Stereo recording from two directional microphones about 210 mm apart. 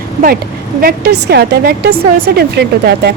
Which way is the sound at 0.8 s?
50° right (ahead or behind).